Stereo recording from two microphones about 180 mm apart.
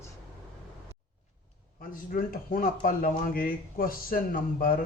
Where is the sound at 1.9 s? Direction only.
50° left (ahead or behind).